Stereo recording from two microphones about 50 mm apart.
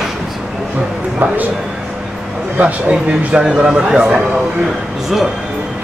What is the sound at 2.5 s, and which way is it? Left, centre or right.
Speech, right.